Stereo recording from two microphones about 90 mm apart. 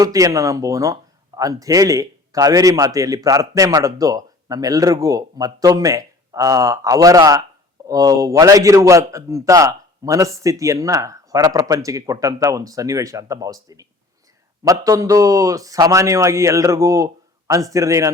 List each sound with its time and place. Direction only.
0.0 s speech: 40° right (ahead or behind)